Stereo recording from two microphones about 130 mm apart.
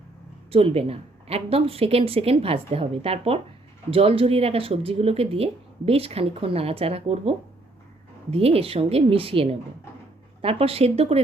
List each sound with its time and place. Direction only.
0.5 s speech: 50° right (ahead or behind)